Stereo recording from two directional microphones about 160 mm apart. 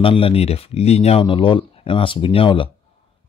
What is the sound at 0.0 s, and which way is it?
Speech, 35° left (ahead or behind).